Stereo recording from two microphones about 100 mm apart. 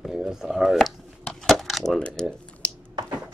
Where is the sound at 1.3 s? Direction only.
Centre (ahead or behind).